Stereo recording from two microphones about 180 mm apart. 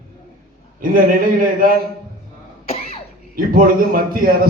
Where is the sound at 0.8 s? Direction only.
50° right (ahead or behind).